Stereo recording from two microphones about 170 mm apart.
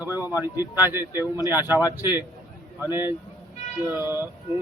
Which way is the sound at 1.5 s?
10° right (ahead or behind).